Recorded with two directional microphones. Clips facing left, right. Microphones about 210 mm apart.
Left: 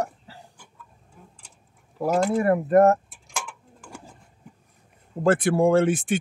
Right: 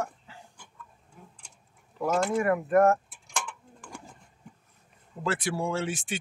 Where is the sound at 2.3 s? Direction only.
35° left (ahead or behind).